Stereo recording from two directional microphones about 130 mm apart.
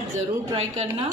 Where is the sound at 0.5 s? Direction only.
50° right (ahead or behind).